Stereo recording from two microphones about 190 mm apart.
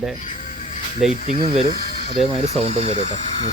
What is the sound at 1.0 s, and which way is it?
Speech, centre (ahead or behind).